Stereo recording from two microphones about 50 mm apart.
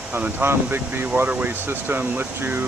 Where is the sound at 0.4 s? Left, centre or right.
Right.